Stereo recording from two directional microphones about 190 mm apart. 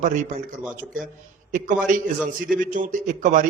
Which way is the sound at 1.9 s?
45° right (ahead or behind).